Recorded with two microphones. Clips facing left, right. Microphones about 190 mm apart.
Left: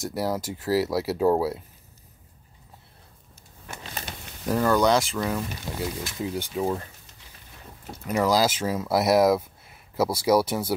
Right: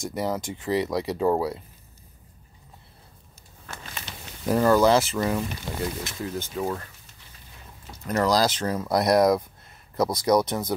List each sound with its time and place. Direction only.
0.0 s speech: 5° left (ahead or behind)
4.5 s speech: 5° right (ahead or behind)
6.2 s speech: 15° left (ahead or behind)
8.1 s speech: 5° left (ahead or behind)